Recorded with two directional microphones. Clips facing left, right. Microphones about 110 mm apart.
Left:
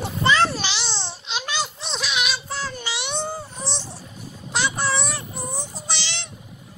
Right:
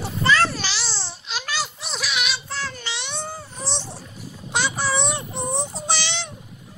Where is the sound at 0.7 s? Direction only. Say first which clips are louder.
Left 2 dB; 25° left (ahead or behind).